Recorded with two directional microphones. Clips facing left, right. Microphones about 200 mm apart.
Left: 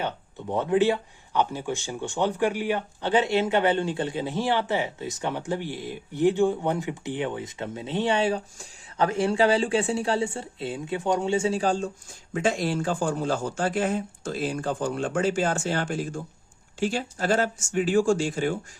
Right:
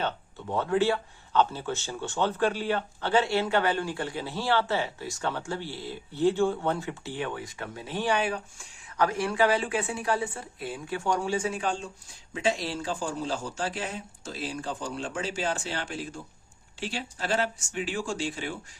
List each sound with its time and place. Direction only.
0.0 s speech: 15° left (ahead or behind); by 11.9 s 40° left (ahead or behind)
12.3 s a man's voice: 50° left (ahead or behind)